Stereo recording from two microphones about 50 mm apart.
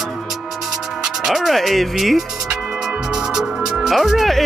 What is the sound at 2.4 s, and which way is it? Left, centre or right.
Music, centre.